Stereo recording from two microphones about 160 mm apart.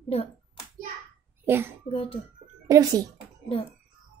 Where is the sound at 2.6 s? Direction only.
25° right (ahead or behind).